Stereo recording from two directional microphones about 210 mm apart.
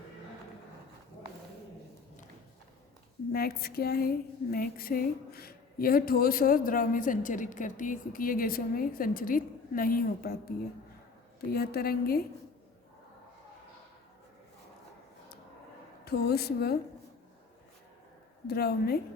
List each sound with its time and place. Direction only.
3.3 s a woman's voice: 45° left (ahead or behind)
11.5 s a woman's voice: 45° left (ahead or behind)
16.0 s a woman's voice: 50° left (ahead or behind)
18.4 s a woman's voice: 50° left (ahead or behind)